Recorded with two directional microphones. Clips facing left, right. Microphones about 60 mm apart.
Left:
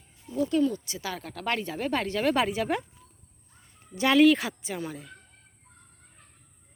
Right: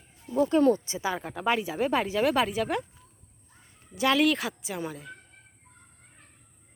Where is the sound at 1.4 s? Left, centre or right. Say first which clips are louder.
Right 3 dB; centre.